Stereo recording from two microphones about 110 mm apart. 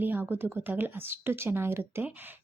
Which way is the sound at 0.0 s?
20° right (ahead or behind).